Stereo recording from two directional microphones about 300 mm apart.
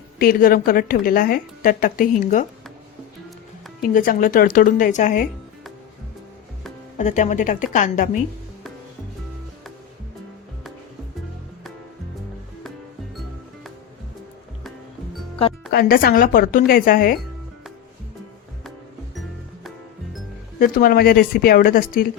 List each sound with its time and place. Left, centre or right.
0.2 s a woman's voice: left
3.8 s a woman's voice: left
7.0 s a woman's voice: left
15.7 s a woman's voice: left
20.6 s a woman's voice: left